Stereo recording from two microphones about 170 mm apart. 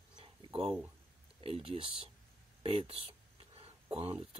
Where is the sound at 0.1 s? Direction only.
35° right (ahead or behind).